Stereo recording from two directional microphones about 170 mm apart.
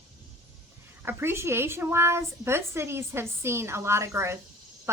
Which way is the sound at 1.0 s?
15° right (ahead or behind).